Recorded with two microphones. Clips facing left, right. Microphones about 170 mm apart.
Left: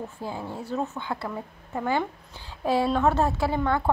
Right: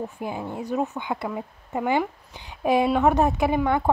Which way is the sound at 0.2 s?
15° right (ahead or behind).